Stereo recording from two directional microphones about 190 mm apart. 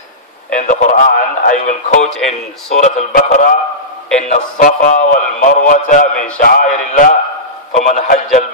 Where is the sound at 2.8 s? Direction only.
40° left (ahead or behind).